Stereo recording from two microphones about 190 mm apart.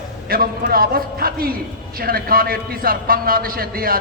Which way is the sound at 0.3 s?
50° right (ahead or behind).